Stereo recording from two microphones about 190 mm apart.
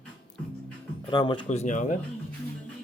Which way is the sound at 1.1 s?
25° left (ahead or behind).